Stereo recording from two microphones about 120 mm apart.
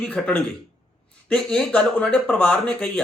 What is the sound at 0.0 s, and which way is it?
Speech, 10° left (ahead or behind).